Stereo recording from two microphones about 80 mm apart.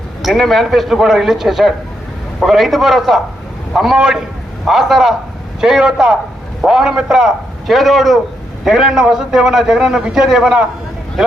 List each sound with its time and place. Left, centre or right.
0.2 s a man's voice: centre